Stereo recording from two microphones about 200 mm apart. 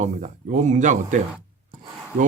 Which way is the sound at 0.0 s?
40° right (ahead or behind).